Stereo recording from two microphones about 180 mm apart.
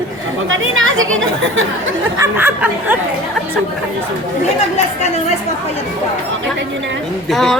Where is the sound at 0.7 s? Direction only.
90° right.